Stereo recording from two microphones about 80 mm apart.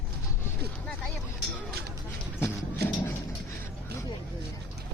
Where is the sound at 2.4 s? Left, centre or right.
Left.